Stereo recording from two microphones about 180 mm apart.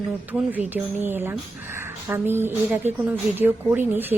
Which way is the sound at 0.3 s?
10° right (ahead or behind).